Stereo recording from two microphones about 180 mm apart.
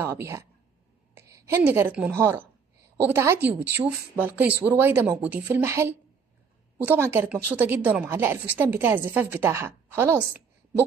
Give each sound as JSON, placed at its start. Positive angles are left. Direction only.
{"t": 0.0, "sound": "a woman's voice", "side_deg": -15}